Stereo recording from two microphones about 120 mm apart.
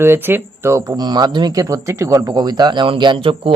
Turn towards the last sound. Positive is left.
turn(degrees=-45)  # may be behind; listen again after turning